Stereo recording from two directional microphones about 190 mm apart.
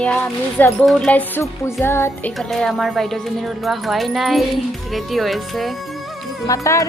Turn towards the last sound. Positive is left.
turn(degrees=15)  # may be behind; listen again after turning